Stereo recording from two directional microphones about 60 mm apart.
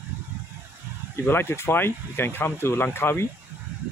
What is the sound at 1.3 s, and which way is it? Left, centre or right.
Speech, left.